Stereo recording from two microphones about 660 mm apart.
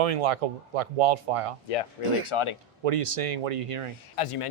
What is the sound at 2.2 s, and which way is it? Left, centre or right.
Speech, left.